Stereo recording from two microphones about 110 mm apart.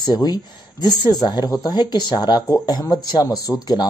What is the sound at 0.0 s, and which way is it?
Speech, 40° left (ahead or behind).